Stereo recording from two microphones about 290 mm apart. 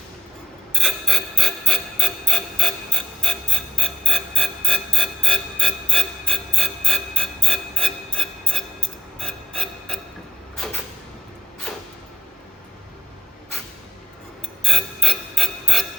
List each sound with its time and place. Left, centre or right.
0.7 s mechanisms: centre
9.1 s a sound: centre
14.6 s music: centre